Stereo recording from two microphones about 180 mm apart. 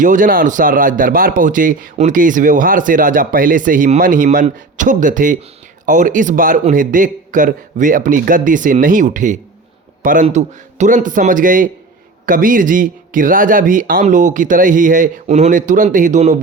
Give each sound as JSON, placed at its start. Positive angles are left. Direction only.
{"t": 0.0, "sound": "a man's voice", "side_deg": -45}